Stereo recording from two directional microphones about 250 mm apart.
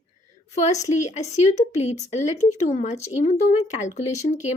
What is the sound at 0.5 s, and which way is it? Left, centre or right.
Speech, left.